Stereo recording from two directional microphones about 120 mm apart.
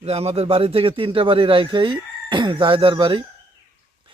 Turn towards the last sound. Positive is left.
turn(degrees=-45)  # may be behind; listen again after turning